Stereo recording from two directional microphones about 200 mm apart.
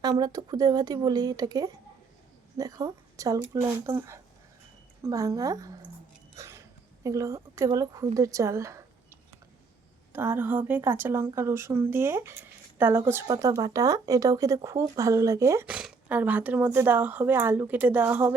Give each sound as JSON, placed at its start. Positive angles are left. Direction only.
{"t": 0.0, "sound": "a woman's voice", "side_deg": -20}
{"t": 6.3, "sound": "a sound", "side_deg": -15}
{"t": 7.0, "sound": "a woman's voice", "side_deg": -15}
{"t": 10.1, "sound": "a woman's voice", "side_deg": -10}